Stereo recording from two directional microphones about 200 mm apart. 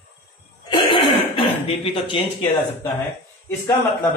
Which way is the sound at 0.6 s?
25° left (ahead or behind).